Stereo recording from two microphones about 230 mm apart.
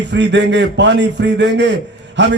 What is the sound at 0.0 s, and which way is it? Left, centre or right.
A man's voice, right.